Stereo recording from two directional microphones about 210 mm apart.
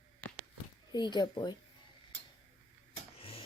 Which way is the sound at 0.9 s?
20° left (ahead or behind).